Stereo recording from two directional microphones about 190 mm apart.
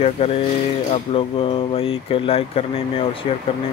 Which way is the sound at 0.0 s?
30° left (ahead or behind).